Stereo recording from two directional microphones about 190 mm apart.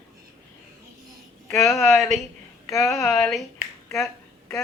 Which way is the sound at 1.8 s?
Centre (ahead or behind).